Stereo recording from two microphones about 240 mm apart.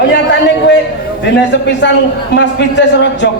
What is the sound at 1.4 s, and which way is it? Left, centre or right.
A man's voice, left.